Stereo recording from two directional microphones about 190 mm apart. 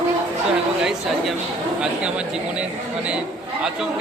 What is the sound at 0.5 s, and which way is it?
Speech, centre (ahead or behind).